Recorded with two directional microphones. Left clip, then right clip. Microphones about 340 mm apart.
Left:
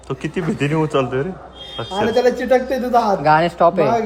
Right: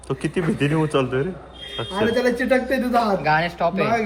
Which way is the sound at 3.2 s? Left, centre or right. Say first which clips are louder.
Left 6 dB; left.